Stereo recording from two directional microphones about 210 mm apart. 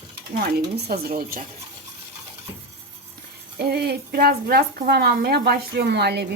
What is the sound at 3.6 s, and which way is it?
A woman's voice, 50° right (ahead or behind).